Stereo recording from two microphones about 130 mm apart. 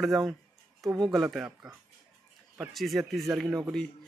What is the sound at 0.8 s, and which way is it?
Speech, 30° right (ahead or behind).